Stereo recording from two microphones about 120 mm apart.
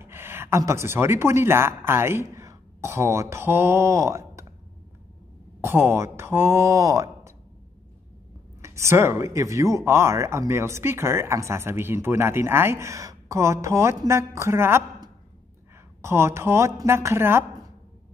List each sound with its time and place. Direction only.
0.0 s speech: 20° right (ahead or behind)
5.6 s speech: 20° right (ahead or behind)
8.5 s speech: 25° right (ahead or behind)